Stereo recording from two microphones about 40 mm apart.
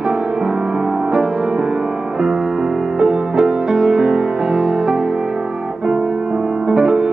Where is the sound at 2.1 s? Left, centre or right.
Centre.